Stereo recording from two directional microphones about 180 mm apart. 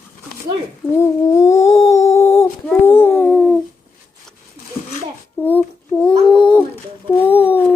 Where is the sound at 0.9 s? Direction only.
15° left (ahead or behind).